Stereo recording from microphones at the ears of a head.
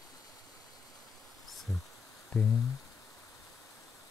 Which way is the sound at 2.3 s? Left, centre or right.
Left.